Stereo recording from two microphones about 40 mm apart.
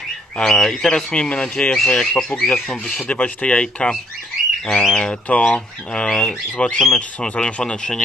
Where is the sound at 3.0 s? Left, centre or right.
Left.